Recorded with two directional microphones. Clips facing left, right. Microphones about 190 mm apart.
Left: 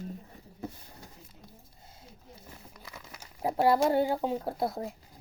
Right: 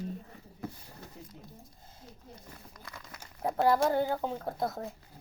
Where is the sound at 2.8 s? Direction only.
5° left (ahead or behind).